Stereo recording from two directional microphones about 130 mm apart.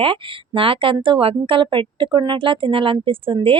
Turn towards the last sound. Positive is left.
turn(degrees=-45)  # may be behind; listen again after turning